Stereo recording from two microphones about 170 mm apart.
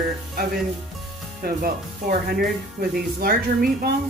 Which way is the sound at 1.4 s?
60° right (ahead or behind).